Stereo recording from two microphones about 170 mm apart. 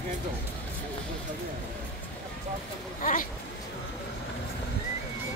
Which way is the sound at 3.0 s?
50° left (ahead or behind).